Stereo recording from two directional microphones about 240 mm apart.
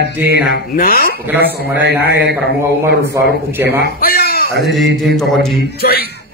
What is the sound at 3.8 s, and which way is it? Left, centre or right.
Speech, left.